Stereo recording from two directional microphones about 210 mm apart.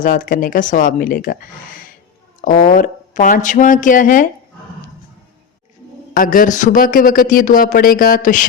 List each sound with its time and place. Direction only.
0.0 s speech: 40° left (ahead or behind)
6.1 s speech: 40° left (ahead or behind)